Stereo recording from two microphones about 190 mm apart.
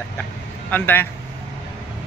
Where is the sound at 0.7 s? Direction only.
10° left (ahead or behind).